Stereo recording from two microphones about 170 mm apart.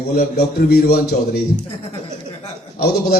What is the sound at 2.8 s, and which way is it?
Speech, 65° left (ahead or behind).